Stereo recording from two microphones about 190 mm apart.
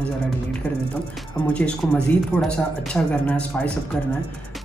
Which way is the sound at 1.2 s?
5° left (ahead or behind).